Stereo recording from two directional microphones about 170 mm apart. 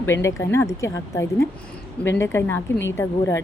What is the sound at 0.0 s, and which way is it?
A woman's voice, 15° left (ahead or behind).